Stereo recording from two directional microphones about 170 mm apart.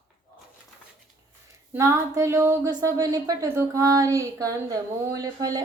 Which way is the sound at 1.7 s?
15° right (ahead or behind).